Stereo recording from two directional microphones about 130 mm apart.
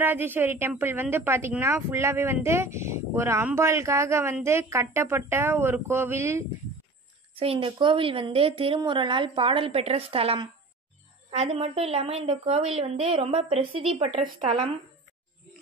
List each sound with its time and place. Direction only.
0.0 s a woman's voice: 15° right (ahead or behind)
7.3 s a woman's voice: 45° right (ahead or behind)
11.2 s a woman's voice: 60° right (ahead or behind)